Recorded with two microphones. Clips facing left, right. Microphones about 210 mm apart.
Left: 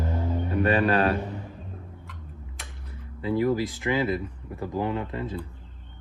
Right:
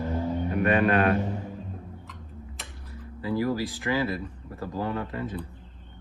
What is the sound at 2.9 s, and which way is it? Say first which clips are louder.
Speech: left 2 dB; 25° left (ahead or behind).